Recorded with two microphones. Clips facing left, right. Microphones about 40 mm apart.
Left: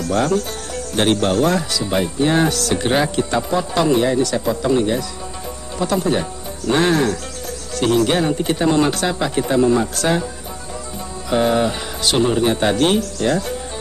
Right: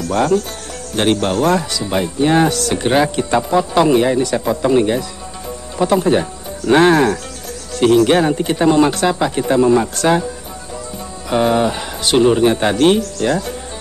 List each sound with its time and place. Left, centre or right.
0.9 s speech: centre; by 7.2 s right
7.7 s speech: centre
11.2 s speech: centre